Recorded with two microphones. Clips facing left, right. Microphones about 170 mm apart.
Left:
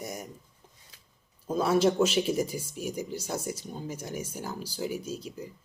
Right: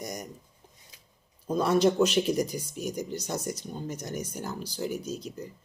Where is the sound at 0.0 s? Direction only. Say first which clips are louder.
Right 1 dB; 5° left (ahead or behind).